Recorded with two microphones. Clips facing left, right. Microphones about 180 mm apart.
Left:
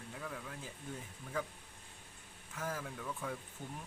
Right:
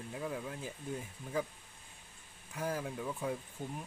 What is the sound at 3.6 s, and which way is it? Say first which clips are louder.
Speech: right 5 dB; 40° right (ahead or behind).